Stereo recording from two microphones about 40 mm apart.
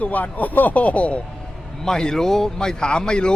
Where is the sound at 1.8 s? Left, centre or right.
Centre.